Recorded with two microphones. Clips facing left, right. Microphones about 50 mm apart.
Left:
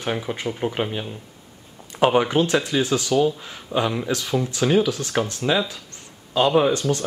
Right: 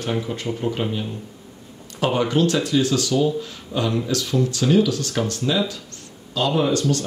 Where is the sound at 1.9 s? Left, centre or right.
Left.